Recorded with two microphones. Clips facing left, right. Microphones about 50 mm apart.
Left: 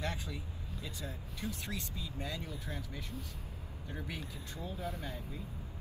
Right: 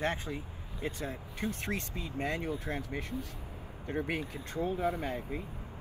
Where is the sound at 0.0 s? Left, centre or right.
Right.